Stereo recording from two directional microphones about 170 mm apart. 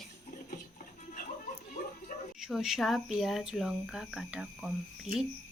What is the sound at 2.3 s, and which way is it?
Speech, centre (ahead or behind).